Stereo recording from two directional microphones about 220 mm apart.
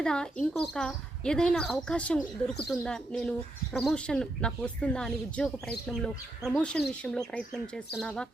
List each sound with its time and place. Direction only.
0.0 s speech: 5° left (ahead or behind)